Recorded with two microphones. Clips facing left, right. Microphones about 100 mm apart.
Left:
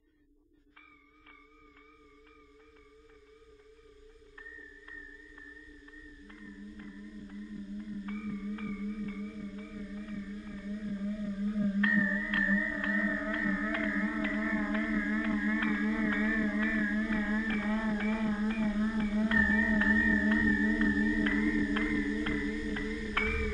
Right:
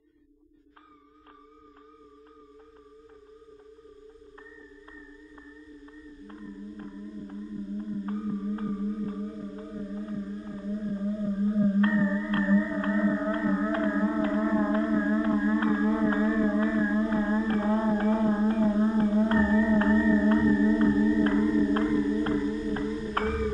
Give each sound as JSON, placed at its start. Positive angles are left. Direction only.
{"t": 6.2, "sound": "music", "side_deg": -35}